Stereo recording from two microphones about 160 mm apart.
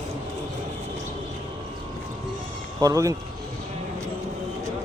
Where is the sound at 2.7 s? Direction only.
20° right (ahead or behind).